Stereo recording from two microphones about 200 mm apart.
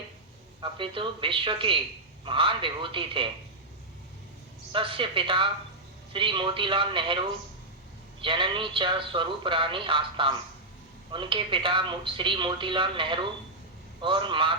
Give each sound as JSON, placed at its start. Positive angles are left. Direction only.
{"t": 0.6, "sound": "speech", "side_deg": -25}
{"t": 4.7, "sound": "speech", "side_deg": -25}
{"t": 8.2, "sound": "speech", "side_deg": -25}